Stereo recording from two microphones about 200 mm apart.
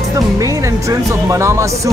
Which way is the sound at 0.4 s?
15° right (ahead or behind).